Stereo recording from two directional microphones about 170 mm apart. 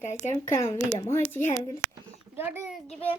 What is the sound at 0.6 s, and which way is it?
Speech, 15° left (ahead or behind).